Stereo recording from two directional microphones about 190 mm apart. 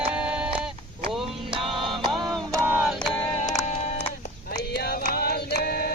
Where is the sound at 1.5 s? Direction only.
25° right (ahead or behind); by 2.9 s 10° right (ahead or behind).